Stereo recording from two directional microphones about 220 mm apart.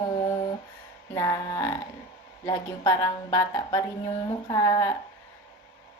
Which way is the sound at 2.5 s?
15° left (ahead or behind).